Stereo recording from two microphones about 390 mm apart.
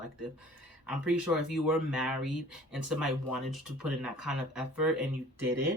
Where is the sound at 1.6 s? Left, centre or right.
Centre.